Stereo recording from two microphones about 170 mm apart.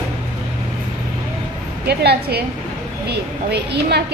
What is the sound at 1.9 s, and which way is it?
A woman's voice, 70° right (ahead or behind).